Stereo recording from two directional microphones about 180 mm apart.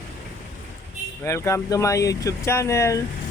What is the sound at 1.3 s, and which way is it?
Speech, 15° left (ahead or behind).